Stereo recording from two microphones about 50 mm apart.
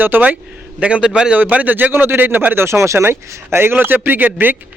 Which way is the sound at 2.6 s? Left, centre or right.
Right.